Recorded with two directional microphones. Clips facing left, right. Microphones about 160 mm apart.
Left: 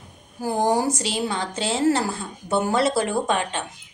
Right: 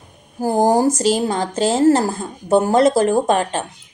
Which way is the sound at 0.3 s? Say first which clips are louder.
Right 6 dB; 40° right (ahead or behind).